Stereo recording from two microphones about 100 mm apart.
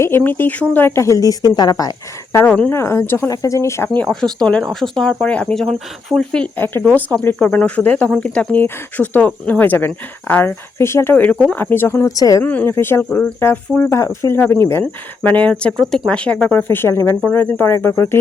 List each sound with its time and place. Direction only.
0.2 s speech: 20° left (ahead or behind); by 2.0 s 40° left (ahead or behind)
2.3 s speech: 20° left (ahead or behind)
3.2 s speech: 35° left (ahead or behind)
3.8 s speech: 10° left (ahead or behind)
12.0 s speech: 35° left (ahead or behind)
12.5 s speech: 15° left (ahead or behind)
13.1 s speech: 10° left (ahead or behind)
13.4 s speech: 25° left (ahead or behind)
16.6 s speech: 25° left (ahead or behind)